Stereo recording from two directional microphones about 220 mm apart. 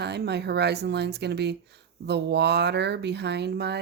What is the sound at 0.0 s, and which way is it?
Speech, 50° right (ahead or behind).